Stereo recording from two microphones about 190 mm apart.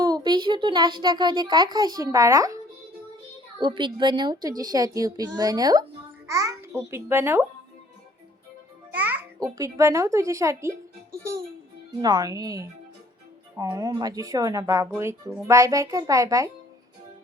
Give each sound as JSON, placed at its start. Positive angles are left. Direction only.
{"t": 0.0, "sound": "a child's voice", "side_deg": -20}
{"t": 3.6, "sound": "a child's voice", "side_deg": -25}
{"t": 9.0, "sound": "music", "side_deg": -10}
{"t": 9.6, "sound": "speech", "side_deg": -15}
{"t": 12.0, "sound": "a child's voice", "side_deg": -20}